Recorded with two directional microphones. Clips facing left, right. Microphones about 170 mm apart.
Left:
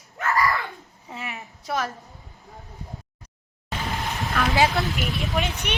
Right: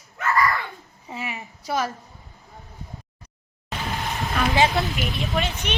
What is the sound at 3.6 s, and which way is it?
Music, centre (ahead or behind).